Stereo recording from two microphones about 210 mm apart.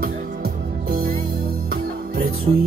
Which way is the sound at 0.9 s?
45° right (ahead or behind).